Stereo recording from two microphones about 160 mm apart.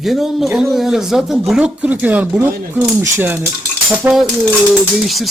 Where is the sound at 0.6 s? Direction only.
Centre (ahead or behind).